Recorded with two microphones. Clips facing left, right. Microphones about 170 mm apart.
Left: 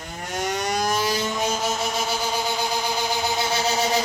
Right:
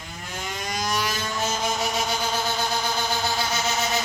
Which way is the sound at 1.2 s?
15° left (ahead or behind).